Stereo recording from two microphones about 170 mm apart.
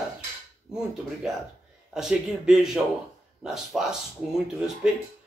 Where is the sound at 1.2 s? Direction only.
5° right (ahead or behind).